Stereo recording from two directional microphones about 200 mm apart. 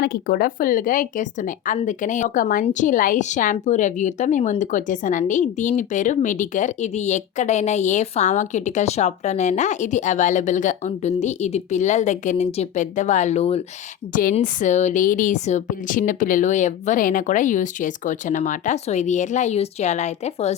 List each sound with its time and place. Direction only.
0.0 s a woman's voice: 50° left (ahead or behind); by 13.6 s 30° left (ahead or behind)
14.1 s a woman's voice: 45° left (ahead or behind)